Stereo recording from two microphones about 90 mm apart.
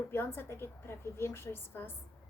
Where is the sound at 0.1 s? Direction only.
25° left (ahead or behind).